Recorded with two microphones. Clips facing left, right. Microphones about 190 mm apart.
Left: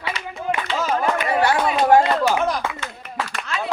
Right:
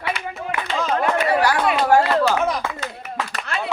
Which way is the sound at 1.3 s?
25° left (ahead or behind).